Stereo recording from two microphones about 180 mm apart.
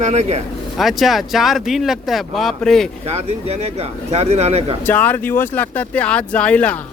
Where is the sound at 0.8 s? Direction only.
Centre (ahead or behind).